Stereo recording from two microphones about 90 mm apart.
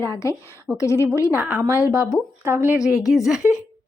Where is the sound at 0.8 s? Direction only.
35° left (ahead or behind).